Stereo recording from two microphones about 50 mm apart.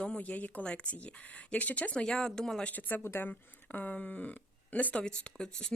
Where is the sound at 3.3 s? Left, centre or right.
Left.